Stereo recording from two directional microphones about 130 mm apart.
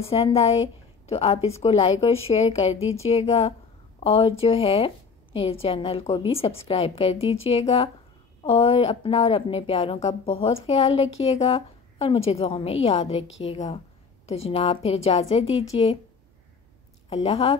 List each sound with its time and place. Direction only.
0.0 s a woman's voice: 50° left (ahead or behind)
17.1 s a woman's voice: 50° left (ahead or behind)